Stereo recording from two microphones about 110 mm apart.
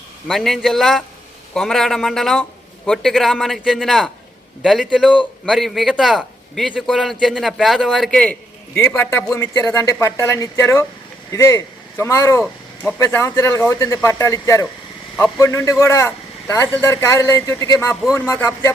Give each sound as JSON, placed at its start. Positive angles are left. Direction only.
{"t": 0.3, "sound": "a man's voice", "side_deg": 0}
{"t": 8.7, "sound": "speech", "side_deg": 20}